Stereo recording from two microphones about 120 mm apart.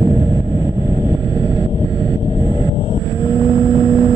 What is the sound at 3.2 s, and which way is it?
Vehicle, 45° right (ahead or behind).